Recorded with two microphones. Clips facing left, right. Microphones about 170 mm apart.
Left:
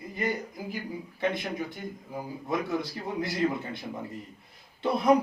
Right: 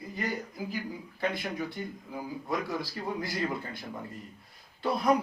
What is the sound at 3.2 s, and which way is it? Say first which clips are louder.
Speech: left 7 dB; 25° left (ahead or behind).